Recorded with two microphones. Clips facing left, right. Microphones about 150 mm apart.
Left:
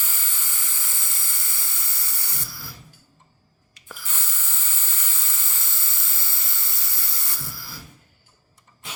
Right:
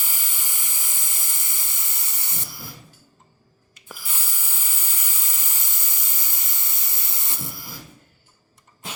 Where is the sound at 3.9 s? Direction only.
10° right (ahead or behind).